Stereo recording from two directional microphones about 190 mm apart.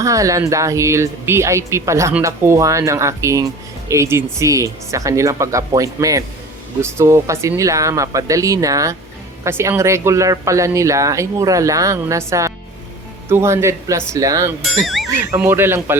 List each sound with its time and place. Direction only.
0.0 s speech: 15° right (ahead or behind)
14.6 s speech: centre (ahead or behind)
15.2 s speech: 10° right (ahead or behind)